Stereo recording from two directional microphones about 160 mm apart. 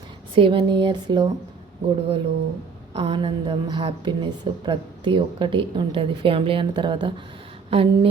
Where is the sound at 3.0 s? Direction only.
30° right (ahead or behind).